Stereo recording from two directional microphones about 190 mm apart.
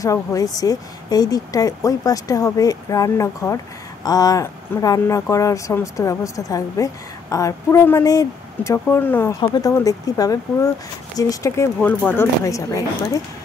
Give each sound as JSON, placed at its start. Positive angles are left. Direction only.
{"t": 0.0, "sound": "a woman's voice", "side_deg": 15}